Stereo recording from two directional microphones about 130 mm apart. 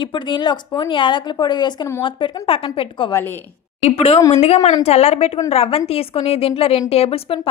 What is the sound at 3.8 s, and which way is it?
Speech, 50° left (ahead or behind).